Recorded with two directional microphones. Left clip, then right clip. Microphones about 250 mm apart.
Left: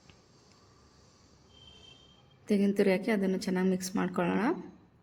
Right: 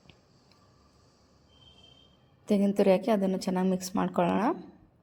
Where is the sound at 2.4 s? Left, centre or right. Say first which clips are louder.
Right 3 dB; centre.